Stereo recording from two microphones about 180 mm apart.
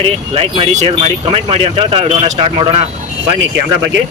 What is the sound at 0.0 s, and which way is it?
Speech, 35° right (ahead or behind).